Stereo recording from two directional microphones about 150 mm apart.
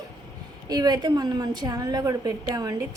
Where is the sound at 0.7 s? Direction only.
25° right (ahead or behind).